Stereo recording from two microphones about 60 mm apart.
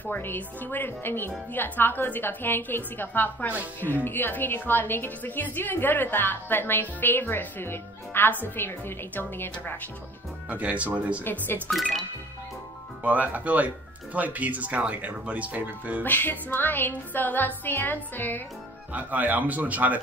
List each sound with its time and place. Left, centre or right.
0.0 s a woman's voice: left
10.5 s speech: right
11.2 s speech: left
13.0 s speech: right
16.0 s a woman's voice: left
18.9 s speech: right